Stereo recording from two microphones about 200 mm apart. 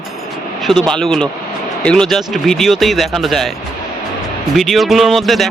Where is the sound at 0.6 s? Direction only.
Centre (ahead or behind).